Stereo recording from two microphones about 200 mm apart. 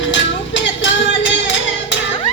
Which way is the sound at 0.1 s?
65° left (ahead or behind).